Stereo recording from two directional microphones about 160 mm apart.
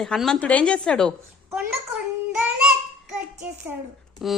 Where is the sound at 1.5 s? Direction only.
15° right (ahead or behind).